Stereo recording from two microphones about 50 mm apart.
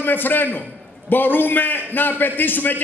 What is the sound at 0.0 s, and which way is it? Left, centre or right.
A man's voice, left.